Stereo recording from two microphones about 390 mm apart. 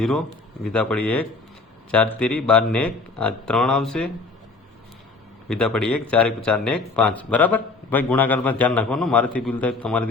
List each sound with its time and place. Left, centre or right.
0.6 s speech: centre
5.5 s speech: centre